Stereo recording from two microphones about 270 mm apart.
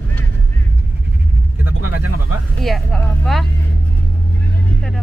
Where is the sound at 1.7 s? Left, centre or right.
Right.